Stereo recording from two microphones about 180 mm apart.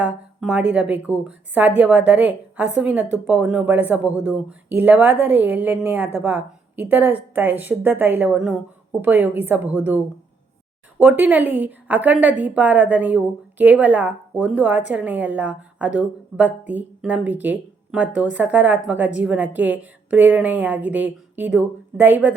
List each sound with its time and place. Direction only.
0.0 s a woman's voice: 5° right (ahead or behind)
11.0 s a woman's voice: 10° right (ahead or behind)